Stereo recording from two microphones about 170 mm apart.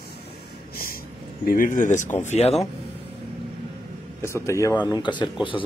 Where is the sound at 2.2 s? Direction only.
40° left (ahead or behind).